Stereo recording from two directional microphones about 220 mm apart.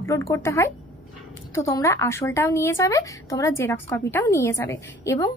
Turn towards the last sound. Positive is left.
turn(degrees=15)  # may be behind; listen again after turning